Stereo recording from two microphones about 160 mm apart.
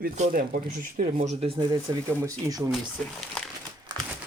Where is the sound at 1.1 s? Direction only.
40° right (ahead or behind).